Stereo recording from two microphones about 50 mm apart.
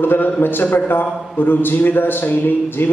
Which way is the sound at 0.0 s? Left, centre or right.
Left.